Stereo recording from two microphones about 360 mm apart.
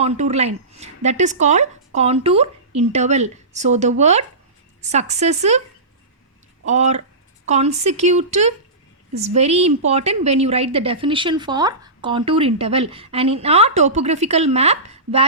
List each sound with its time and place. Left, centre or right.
0.0 s speech: centre
6.7 s a woman's voice: centre